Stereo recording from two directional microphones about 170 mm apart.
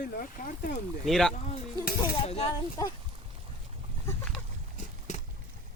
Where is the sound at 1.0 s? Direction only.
Centre (ahead or behind).